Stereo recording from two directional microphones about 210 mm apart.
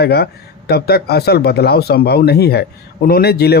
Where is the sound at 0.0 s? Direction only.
50° left (ahead or behind).